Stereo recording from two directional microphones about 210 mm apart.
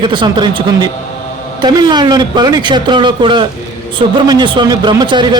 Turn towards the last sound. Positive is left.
turn(degrees=-20)  # may be behind; listen again after turning